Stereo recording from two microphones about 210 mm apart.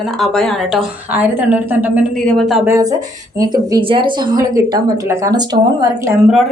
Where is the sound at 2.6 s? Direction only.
15° right (ahead or behind).